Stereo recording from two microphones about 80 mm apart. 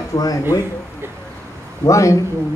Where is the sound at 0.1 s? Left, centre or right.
Left.